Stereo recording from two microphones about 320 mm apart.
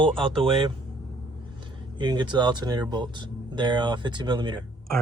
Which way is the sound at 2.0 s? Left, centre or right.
Centre.